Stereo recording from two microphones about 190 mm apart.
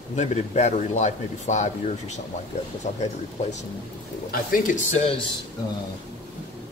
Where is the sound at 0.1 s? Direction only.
35° left (ahead or behind).